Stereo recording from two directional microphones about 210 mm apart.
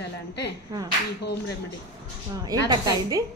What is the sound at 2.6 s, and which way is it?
Speech, 15° right (ahead or behind).